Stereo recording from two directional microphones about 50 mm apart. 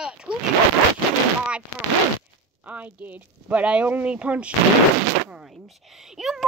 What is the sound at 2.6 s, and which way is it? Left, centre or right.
Speech, right.